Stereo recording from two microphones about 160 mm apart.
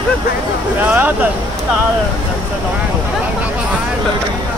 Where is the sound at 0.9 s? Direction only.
10° right (ahead or behind).